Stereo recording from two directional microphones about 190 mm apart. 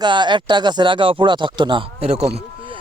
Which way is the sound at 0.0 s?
25° right (ahead or behind).